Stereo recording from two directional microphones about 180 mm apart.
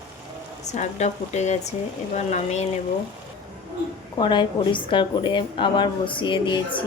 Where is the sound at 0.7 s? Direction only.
40° left (ahead or behind).